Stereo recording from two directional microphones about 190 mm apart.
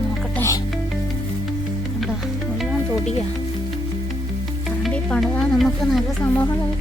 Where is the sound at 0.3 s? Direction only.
15° left (ahead or behind).